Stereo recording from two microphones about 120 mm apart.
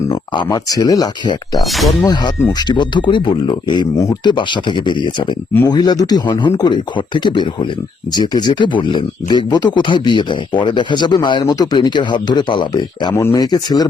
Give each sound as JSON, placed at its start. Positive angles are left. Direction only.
{"t": 0.3, "sound": "a man's voice", "side_deg": 35}
{"t": 1.5, "sound": "speech", "side_deg": 0}
{"t": 2.5, "sound": "a man's voice", "side_deg": 35}
{"t": 13.1, "sound": "a man's voice", "side_deg": 25}